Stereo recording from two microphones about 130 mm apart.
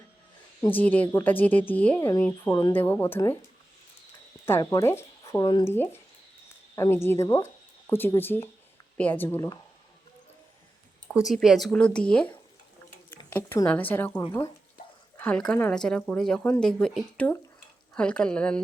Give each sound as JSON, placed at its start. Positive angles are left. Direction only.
{"t": 0.7, "sound": "speech", "side_deg": 15}
{"t": 2.0, "sound": "speech", "side_deg": 25}
{"t": 4.6, "sound": "speech", "side_deg": 30}
{"t": 4.9, "sound": "a sound", "side_deg": 20}
{"t": 5.4, "sound": "speech", "side_deg": 35}
{"t": 5.6, "sound": "speech", "side_deg": 15}
{"t": 11.1, "sound": "speech", "side_deg": -5}
{"t": 13.1, "sound": "a sound", "side_deg": 15}
{"t": 13.7, "sound": "speech", "side_deg": 10}